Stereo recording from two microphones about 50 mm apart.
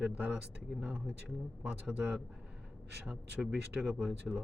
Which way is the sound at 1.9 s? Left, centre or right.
Right.